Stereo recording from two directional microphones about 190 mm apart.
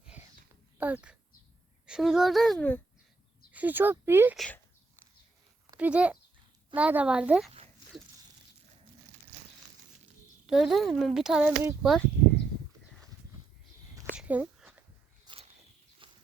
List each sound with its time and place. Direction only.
0.0 s a sound: 5° right (ahead or behind)
0.8 s a child's voice: 10° right (ahead or behind)
3.5 s speech: 10° right (ahead or behind)
4.4 s speech: 5° left (ahead or behind)
5.7 s a child's voice: 5° right (ahead or behind)
10.4 s a child's voice: centre (ahead or behind)
14.2 s a sound: 5° right (ahead or behind)
15.2 s walk: 25° right (ahead or behind)